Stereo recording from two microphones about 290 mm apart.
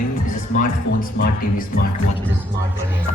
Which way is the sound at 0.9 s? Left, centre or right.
Left.